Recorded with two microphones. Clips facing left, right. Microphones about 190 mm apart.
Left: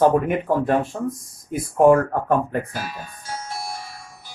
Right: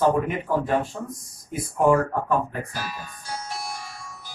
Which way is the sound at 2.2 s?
55° left (ahead or behind).